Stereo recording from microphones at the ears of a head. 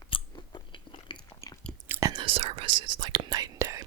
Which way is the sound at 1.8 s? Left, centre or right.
Right.